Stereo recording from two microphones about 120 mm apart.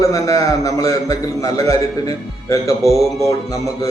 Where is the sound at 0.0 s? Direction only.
30° left (ahead or behind).